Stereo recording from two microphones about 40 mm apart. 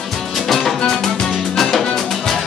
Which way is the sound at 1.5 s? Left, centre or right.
Centre.